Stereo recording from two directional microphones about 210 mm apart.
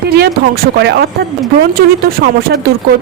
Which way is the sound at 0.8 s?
50° right (ahead or behind).